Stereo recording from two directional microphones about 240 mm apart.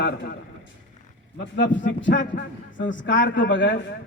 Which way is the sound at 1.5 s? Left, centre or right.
Left.